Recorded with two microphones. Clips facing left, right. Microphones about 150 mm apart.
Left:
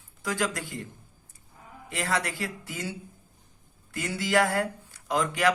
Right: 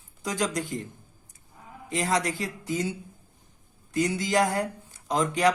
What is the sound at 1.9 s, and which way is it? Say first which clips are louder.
Speech: right 3 dB; 20° right (ahead or behind).